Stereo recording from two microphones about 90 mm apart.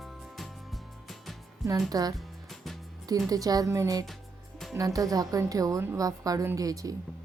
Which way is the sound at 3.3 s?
45° right (ahead or behind).